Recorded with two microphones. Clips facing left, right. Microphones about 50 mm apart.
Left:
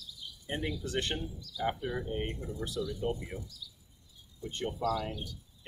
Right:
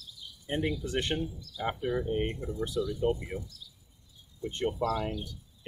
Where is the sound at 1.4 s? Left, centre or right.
Right.